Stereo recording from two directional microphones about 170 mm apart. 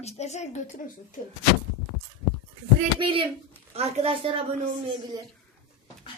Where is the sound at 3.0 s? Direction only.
30° right (ahead or behind).